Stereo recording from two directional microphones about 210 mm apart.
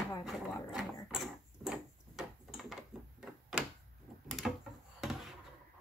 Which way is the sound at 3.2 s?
Centre (ahead or behind).